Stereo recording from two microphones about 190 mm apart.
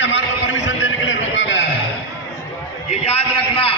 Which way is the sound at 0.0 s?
70° left (ahead or behind).